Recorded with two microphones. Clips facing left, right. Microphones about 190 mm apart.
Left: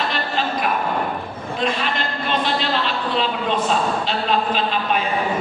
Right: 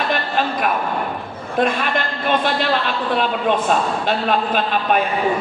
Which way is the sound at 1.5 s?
50° right (ahead or behind).